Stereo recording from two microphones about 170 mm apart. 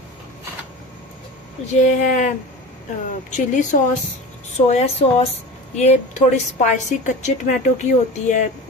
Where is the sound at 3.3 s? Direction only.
45° left (ahead or behind).